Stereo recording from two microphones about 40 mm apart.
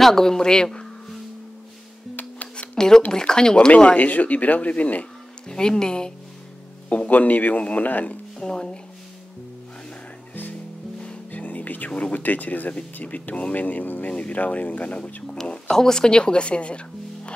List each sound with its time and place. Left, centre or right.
0.0 s a man's voice: centre
2.7 s a man's voice: centre
3.7 s speech: left
5.5 s speech: centre
6.9 s speech: left
8.4 s speech: centre
11.3 s music: left
11.9 s speech: left
15.7 s speech: centre